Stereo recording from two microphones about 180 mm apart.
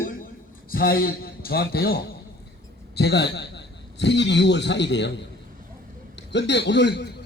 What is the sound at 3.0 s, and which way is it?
A man's voice, 70° left (ahead or behind).